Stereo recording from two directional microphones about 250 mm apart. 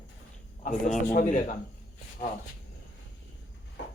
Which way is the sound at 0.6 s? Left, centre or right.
Left.